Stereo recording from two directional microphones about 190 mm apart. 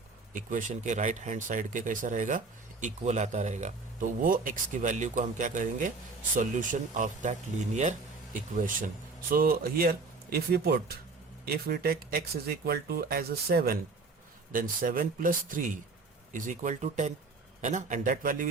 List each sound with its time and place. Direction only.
0.3 s speech: 40° right (ahead or behind)